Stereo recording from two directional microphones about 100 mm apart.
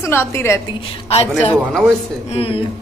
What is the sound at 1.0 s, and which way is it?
Speech, 85° left.